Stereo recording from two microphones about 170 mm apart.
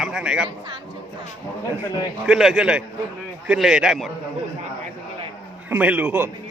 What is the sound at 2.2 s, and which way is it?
Speech, centre (ahead or behind).